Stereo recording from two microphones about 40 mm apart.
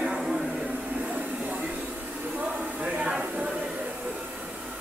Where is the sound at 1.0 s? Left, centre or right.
Right.